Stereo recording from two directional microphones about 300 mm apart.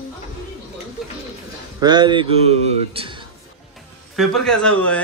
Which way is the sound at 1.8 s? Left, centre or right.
Centre.